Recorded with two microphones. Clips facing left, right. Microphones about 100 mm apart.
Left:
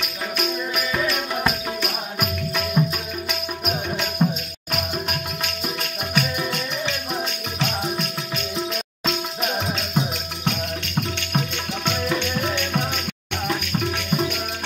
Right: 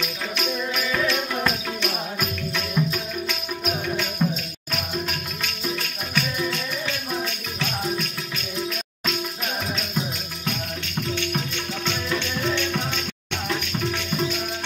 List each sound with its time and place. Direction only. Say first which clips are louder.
0.0 s music: left 1 dB; 10° left (ahead or behind)
9.0 s music: left 3 dB; 25° left (ahead or behind)